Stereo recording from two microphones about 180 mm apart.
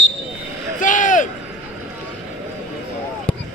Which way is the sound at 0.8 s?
45° left (ahead or behind).